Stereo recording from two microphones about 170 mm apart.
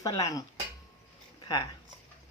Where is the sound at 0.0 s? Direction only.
20° left (ahead or behind).